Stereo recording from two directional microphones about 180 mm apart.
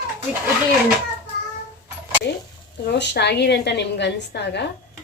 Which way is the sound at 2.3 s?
65° left (ahead or behind).